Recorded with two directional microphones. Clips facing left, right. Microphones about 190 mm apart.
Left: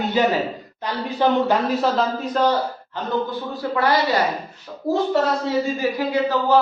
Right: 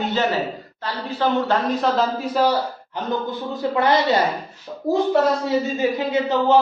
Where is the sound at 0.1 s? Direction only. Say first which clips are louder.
Left 2 dB; 15° left (ahead or behind); by 3.0 s 10° right (ahead or behind).